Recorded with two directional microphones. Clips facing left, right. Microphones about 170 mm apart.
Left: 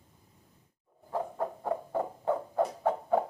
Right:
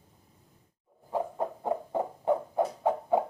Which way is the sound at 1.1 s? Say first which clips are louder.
Right 2 dB; 15° right (ahead or behind).